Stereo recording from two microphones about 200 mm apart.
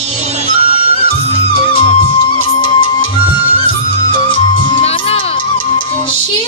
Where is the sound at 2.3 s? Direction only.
25° left (ahead or behind).